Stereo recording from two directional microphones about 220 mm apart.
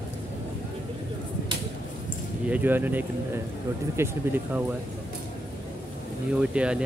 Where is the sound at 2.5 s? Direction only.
10° right (ahead or behind).